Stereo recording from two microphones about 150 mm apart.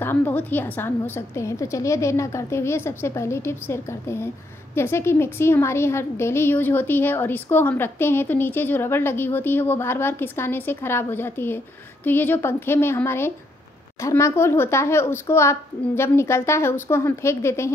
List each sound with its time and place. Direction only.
0.0 s a woman's voice: 15° left (ahead or behind)